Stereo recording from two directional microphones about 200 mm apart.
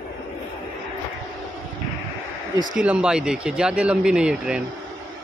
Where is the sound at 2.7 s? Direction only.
5° right (ahead or behind).